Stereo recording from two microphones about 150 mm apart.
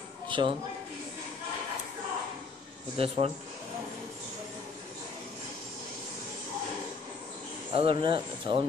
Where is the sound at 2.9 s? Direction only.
40° right (ahead or behind).